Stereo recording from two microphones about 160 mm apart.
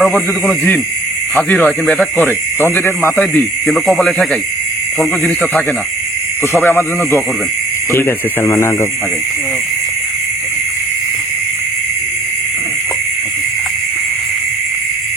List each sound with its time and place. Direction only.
0.0 s speech: 5° left (ahead or behind)
3.2 s speech: centre (ahead or behind)
6.6 s speech: 15° left (ahead or behind)